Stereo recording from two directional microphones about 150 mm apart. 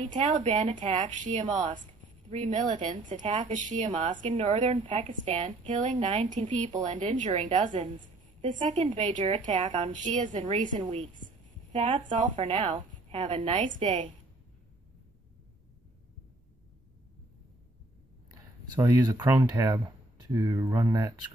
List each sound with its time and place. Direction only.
0.0 s a woman's voice: 50° right (ahead or behind)
4.0 s a woman's voice: 35° right (ahead or behind)
18.3 s speech: 25° right (ahead or behind)